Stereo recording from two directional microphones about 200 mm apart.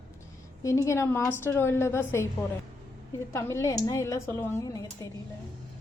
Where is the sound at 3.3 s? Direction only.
15° left (ahead or behind).